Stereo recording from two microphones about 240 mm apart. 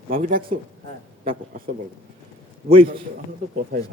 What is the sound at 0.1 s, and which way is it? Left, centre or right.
Speech, right.